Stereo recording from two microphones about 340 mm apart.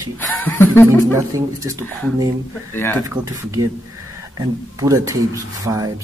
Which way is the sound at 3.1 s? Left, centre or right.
Centre.